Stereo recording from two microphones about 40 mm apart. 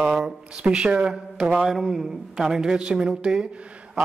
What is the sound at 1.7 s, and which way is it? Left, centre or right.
Speech, centre.